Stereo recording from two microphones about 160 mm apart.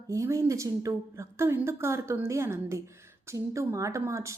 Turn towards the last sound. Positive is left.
turn(degrees=-20)  # may be behind; listen again after turning